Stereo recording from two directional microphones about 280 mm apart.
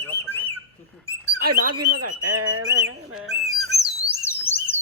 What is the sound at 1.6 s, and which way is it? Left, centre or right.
Speech, right.